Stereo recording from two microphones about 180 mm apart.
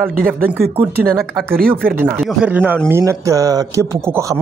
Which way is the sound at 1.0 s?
Centre (ahead or behind).